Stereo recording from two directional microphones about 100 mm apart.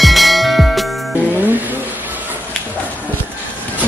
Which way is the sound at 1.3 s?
20° right (ahead or behind).